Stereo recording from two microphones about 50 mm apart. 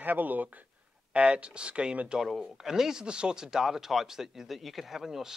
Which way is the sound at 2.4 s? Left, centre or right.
Centre.